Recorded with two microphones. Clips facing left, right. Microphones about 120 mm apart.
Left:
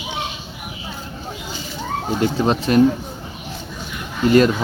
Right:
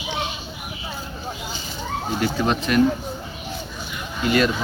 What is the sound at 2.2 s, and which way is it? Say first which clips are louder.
Speech: left 4 dB; 30° left (ahead or behind).